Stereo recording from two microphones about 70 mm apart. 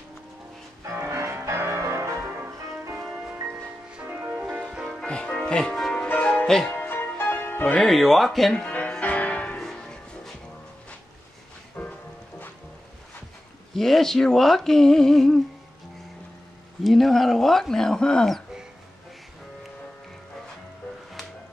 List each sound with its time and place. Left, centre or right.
0.8 s music: right
4.1 s music: right
4.6 s music: centre
5.0 s music: centre
6.4 s speech: centre
6.7 s music: left
7.8 s speech: centre
8.6 s music: centre
9.6 s music: centre
11.8 s music: left
13.7 s speech: centre
16.8 s speech: centre